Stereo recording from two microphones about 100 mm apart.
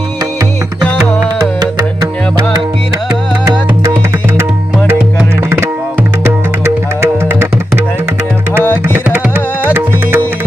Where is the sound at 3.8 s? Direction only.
25° right (ahead or behind).